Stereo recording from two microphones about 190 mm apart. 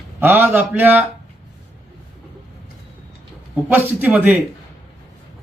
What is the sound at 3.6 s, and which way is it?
Speech, 10° right (ahead or behind).